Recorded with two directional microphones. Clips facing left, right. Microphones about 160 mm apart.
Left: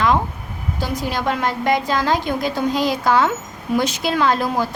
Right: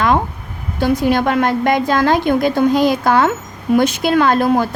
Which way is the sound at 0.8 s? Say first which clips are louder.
Right 10 dB; 55° right (ahead or behind).